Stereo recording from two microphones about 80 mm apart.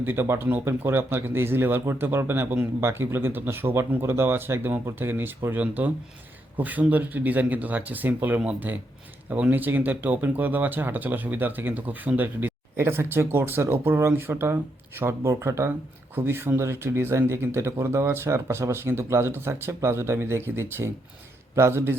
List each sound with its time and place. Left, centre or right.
0.0 s a man's voice: right